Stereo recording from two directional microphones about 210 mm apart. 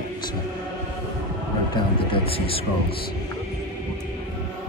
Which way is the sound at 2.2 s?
25° left (ahead or behind).